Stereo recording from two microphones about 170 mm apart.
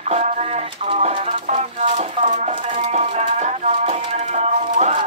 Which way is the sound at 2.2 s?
45° right (ahead or behind).